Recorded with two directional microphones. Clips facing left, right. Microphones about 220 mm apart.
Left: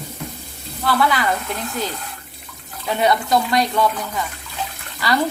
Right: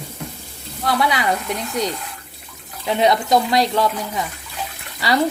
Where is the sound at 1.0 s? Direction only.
20° right (ahead or behind).